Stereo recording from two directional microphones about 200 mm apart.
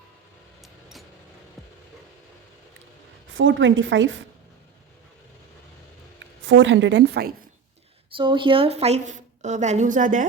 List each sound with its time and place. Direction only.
0.6 s vehicle: centre (ahead or behind)
3.2 s a woman's voice: 70° right (ahead or behind)
6.1 s a woman's voice: 70° right (ahead or behind); by 7.3 s 55° right (ahead or behind)
8.1 s a woman's voice: 25° right (ahead or behind); by 10.2 s 40° right (ahead or behind)